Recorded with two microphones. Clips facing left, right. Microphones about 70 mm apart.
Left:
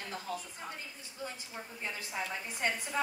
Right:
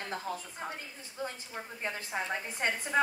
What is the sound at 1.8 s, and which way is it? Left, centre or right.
Speech, right.